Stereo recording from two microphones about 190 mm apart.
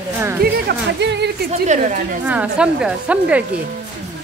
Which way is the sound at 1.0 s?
65° right (ahead or behind).